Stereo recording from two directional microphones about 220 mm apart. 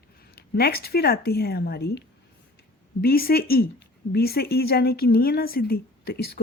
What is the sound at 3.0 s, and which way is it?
Speech, 45° left (ahead or behind).